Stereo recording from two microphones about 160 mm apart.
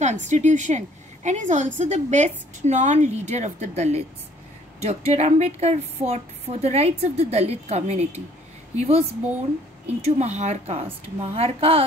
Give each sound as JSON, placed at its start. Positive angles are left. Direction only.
{"t": 0.0, "sound": "a woman's voice", "side_deg": -50}
{"t": 10.0, "sound": "a woman's voice", "side_deg": -45}